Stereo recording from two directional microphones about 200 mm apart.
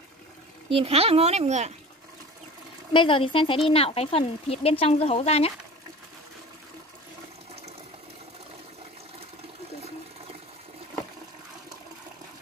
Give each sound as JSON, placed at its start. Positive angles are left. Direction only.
{"t": 0.7, "sound": "a child's voice", "side_deg": -30}
{"t": 2.9, "sound": "speech", "side_deg": 25}